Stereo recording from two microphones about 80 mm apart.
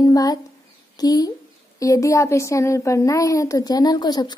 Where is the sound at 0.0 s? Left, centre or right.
Left.